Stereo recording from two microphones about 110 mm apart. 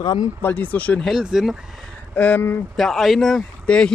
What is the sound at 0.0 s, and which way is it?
Speech, 40° left (ahead or behind).